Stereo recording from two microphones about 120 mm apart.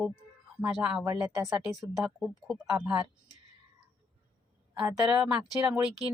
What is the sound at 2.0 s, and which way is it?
Speech, 5° right (ahead or behind).